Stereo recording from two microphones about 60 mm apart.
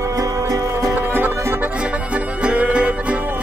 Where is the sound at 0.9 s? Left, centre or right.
Right.